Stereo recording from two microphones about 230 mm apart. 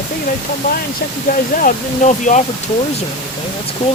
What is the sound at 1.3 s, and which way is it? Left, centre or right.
Speech, left.